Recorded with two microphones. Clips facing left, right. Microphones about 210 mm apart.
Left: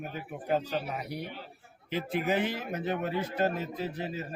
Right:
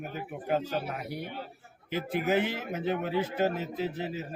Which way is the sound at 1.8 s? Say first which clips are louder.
Even; 50° right (ahead or behind).